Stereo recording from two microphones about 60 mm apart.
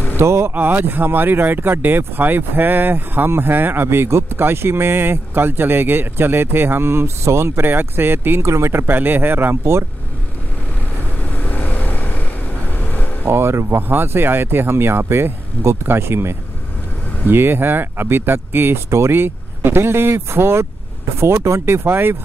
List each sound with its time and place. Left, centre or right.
0.2 s speech: right
0.6 s speech: right
11.4 s vehicle: left
13.2 s speech: right